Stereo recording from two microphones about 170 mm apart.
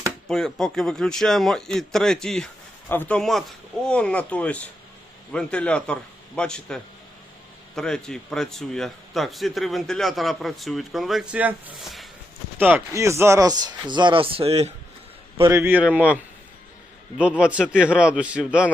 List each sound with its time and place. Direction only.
0.3 s a man's voice: 5° left (ahead or behind)
12.5 s speech: 10° right (ahead or behind); by 14.7 s 35° right (ahead or behind)
15.4 s a man's voice: 15° right (ahead or behind)